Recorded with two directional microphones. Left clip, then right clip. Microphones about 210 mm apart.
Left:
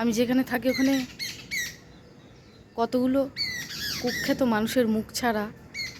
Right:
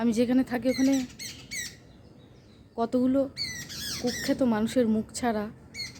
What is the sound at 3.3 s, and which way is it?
Squawk, 60° right (ahead or behind).